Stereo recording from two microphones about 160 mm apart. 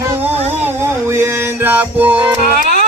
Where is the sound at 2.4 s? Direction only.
70° right (ahead or behind).